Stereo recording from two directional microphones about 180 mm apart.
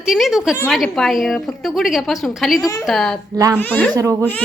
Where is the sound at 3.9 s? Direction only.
15° right (ahead or behind).